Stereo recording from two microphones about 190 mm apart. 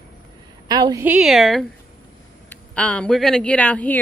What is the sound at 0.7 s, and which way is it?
Speech, 20° right (ahead or behind).